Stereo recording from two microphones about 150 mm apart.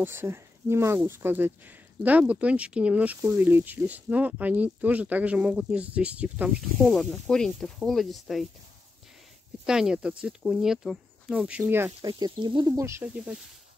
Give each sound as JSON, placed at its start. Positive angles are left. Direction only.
{"t": 0.0, "sound": "speech", "side_deg": -15}
{"t": 9.7, "sound": "speech", "side_deg": -5}
{"t": 12.1, "sound": "speech", "side_deg": -30}
{"t": 13.0, "sound": "speech", "side_deg": -5}